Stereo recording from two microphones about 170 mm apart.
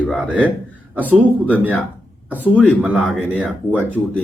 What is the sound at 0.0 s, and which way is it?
Speech, 5° right (ahead or behind).